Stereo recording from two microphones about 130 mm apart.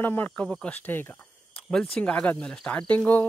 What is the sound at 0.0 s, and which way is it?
Speech, 15° left (ahead or behind).